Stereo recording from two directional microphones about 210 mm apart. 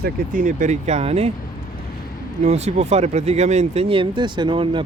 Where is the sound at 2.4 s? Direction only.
30° right (ahead or behind).